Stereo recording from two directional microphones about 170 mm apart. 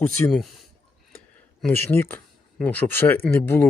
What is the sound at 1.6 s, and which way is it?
Speech, 15° left (ahead or behind).